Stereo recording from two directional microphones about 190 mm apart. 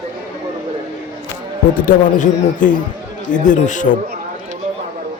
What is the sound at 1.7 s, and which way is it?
A man's voice, 45° left (ahead or behind).